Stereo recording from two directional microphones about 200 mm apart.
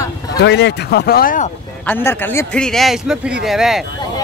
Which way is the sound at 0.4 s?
60° left (ahead or behind).